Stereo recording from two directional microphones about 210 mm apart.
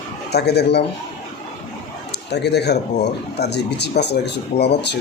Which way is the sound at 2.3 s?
50° left (ahead or behind).